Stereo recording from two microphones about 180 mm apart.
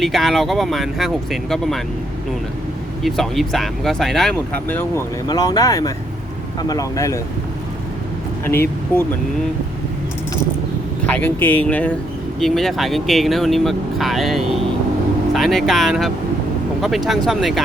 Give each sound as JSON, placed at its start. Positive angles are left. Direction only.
{"t": 0.0, "sound": "speech", "side_deg": 0}
{"t": 3.0, "sound": "speech", "side_deg": 0}
{"t": 4.7, "sound": "speech", "side_deg": 15}
{"t": 8.4, "sound": "speech", "side_deg": 15}
{"t": 11.0, "sound": "speech", "side_deg": 10}